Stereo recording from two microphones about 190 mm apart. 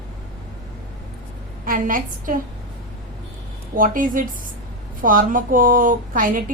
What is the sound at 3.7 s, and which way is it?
A woman's voice, 45° right (ahead or behind).